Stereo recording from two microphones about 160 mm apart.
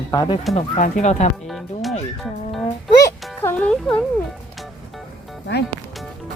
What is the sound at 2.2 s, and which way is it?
Speech, centre (ahead or behind).